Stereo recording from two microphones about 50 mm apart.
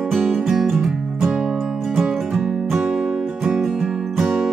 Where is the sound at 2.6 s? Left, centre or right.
Centre.